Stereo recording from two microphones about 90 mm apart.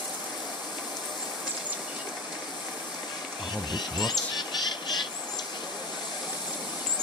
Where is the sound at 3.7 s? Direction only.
55° left (ahead or behind).